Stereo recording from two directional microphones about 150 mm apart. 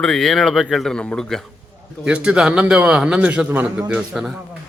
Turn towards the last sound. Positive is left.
turn(degrees=-5)  # may be behind; listen again after turning